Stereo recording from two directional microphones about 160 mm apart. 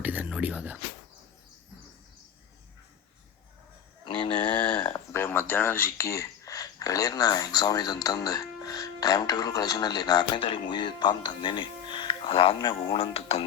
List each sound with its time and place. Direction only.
0.0 s speech: 10° right (ahead or behind)
4.0 s a sound: 30° left (ahead or behind)
4.8 s speech: 20° left (ahead or behind); by 13.4 s 40° left (ahead or behind)